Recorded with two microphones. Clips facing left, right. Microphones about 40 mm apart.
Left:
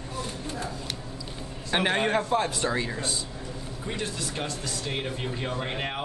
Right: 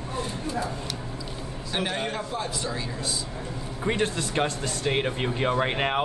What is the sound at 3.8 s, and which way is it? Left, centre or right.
Speech, right.